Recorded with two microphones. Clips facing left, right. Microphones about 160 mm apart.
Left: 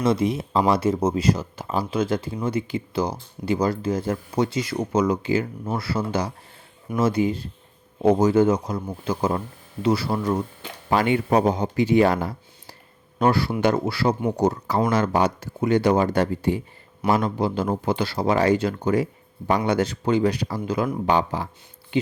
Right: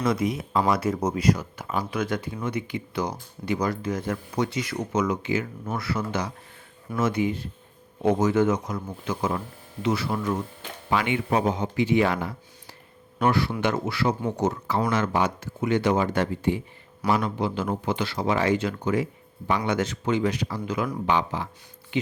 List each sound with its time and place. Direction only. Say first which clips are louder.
0.0 s speech: left 3 dB; 30° left (ahead or behind)